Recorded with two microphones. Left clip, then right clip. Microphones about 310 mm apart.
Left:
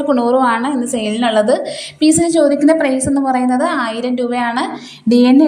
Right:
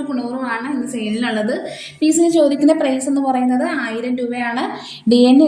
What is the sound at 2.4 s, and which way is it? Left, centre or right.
A woman's voice, left.